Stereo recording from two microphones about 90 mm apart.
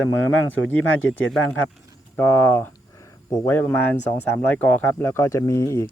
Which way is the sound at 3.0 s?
35° left (ahead or behind).